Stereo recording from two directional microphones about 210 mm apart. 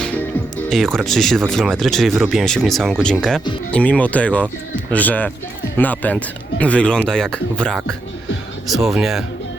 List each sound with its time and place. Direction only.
0.7 s speech: centre (ahead or behind)